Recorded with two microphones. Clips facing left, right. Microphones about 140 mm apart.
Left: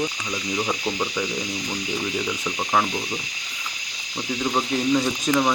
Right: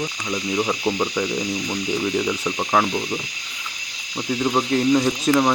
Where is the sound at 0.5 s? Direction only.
15° right (ahead or behind).